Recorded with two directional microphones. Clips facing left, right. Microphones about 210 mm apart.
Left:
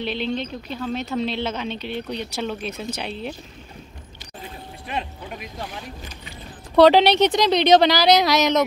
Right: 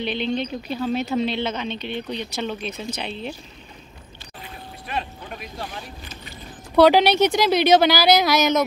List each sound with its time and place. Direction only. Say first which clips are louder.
0.0 s speech: right 1 dB; centre (ahead or behind)
4.8 s a sound: even; 20° left (ahead or behind)
6.7 s speech: left 1 dB; centre (ahead or behind)